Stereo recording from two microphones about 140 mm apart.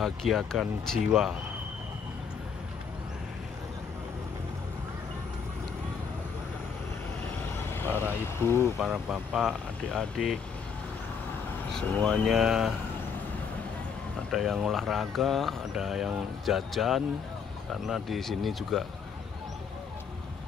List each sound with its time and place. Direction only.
0.0 s speech: centre (ahead or behind)
7.7 s vehicle: 15° left (ahead or behind)
8.4 s speech: 15° left (ahead or behind)
8.7 s speech: 5° right (ahead or behind)
11.7 s speech: 5° left (ahead or behind)
14.3 s speech: centre (ahead or behind)